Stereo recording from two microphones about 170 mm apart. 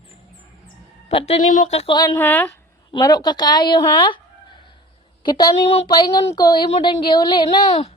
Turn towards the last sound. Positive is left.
turn(degrees=30)  # may be behind; listen again after turning